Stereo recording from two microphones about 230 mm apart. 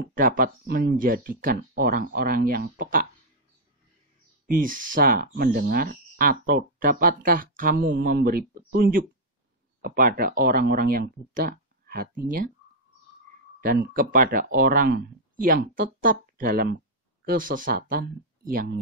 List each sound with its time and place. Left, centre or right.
0.0 s speech: right
4.5 s speech: right
13.6 s speech: right